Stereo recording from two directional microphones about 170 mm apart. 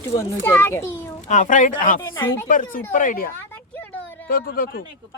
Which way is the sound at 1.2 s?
45° left (ahead or behind).